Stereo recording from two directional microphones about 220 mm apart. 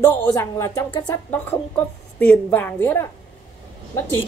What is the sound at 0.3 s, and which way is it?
Speech, 15° left (ahead or behind).